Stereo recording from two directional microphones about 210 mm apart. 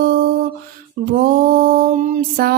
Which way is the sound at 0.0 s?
45° right (ahead or behind).